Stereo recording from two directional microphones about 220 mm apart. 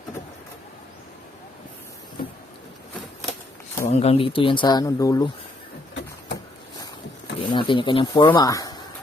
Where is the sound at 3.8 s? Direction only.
30° left (ahead or behind).